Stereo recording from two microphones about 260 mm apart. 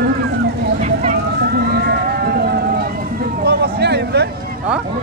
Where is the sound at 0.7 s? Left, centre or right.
Right.